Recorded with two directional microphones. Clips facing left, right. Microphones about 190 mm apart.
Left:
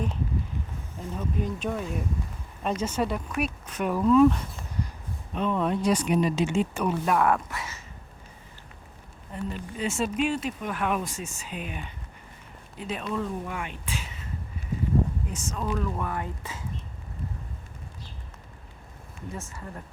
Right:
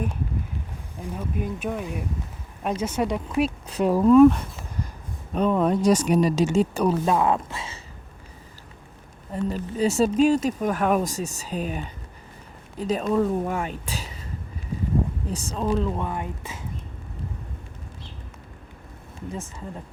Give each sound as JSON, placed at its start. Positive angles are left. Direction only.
{"t": 0.9, "sound": "speech", "side_deg": -10}
{"t": 3.2, "sound": "speech", "side_deg": -25}
{"t": 5.3, "sound": "speech", "side_deg": -40}
{"t": 9.3, "sound": "speech", "side_deg": -40}
{"t": 15.3, "sound": "speech", "side_deg": -35}
{"t": 19.4, "sound": "speech", "side_deg": -20}